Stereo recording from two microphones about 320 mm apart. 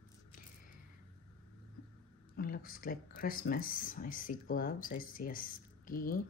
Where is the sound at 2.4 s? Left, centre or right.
Left.